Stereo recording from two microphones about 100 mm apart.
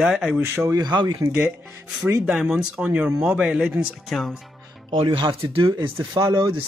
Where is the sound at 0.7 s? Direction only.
45° right (ahead or behind).